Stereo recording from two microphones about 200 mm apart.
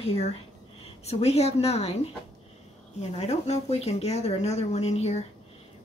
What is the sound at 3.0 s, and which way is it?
Speech, 35° left (ahead or behind).